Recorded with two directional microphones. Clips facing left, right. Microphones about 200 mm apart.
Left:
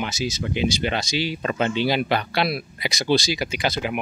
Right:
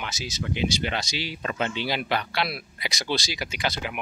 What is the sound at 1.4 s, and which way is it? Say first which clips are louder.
Speech: left 3 dB; 40° left (ahead or behind).